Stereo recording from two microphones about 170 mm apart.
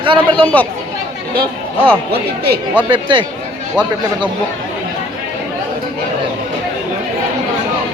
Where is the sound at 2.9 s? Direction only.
30° right (ahead or behind).